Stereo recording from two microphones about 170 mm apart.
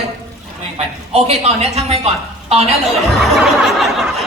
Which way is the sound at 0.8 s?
35° right (ahead or behind).